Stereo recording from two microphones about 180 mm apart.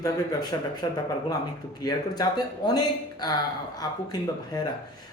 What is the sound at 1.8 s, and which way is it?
A man's voice, 20° left (ahead or behind).